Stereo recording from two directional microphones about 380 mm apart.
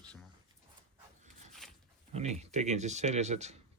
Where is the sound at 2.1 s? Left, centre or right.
Centre.